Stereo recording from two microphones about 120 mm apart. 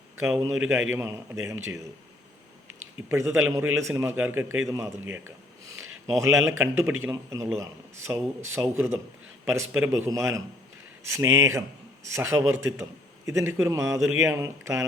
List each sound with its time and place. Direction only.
0.5 s a man's voice: 5° right (ahead or behind)
0.9 s speech: 25° right (ahead or behind)
3.1 s speech: 20° right (ahead or behind)
5.6 s speech: 25° right (ahead or behind)